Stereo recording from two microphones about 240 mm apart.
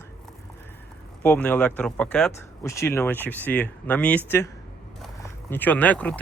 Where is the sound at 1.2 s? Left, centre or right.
Centre.